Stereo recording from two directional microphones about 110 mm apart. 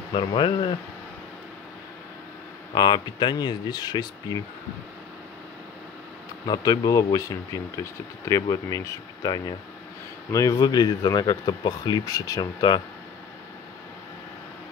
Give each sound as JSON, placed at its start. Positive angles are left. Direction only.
{"t": 0.1, "sound": "speech", "side_deg": 50}
{"t": 2.7, "sound": "speech", "side_deg": 40}
{"t": 6.4, "sound": "speech", "side_deg": 35}